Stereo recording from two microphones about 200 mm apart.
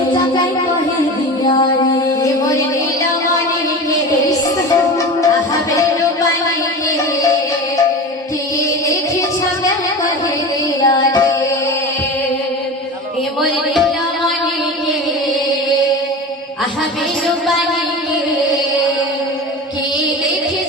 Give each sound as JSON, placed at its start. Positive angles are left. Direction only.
{"t": 1.5, "sound": "music", "side_deg": 25}
{"t": 10.8, "sound": "music", "side_deg": 20}